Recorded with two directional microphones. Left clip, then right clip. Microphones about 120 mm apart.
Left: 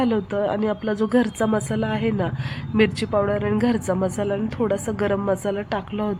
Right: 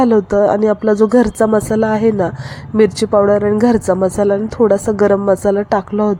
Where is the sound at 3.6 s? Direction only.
35° right (ahead or behind).